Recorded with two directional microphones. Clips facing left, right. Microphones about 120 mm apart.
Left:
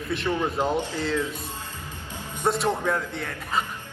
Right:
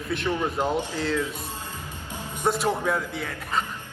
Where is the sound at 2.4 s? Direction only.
Centre (ahead or behind).